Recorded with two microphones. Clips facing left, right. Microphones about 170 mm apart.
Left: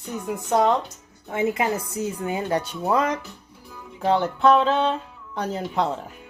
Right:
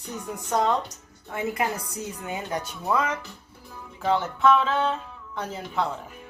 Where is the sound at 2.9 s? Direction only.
35° left (ahead or behind).